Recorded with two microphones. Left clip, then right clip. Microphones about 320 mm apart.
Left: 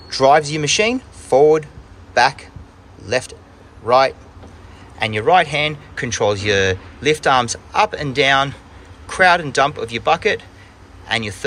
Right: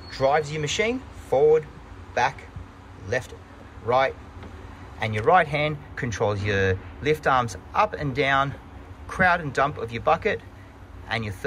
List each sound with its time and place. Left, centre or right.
0.1 s speech: centre